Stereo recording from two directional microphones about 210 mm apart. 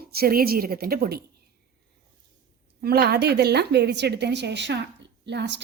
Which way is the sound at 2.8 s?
45° right (ahead or behind).